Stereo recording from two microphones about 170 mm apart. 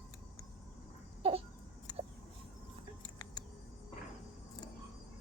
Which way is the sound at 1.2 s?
35° right (ahead or behind).